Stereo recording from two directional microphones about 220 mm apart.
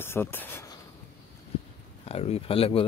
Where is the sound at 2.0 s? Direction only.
25° left (ahead or behind).